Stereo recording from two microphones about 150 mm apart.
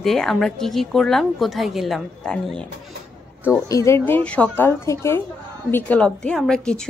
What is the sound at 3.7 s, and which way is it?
A woman's voice, 20° left (ahead or behind).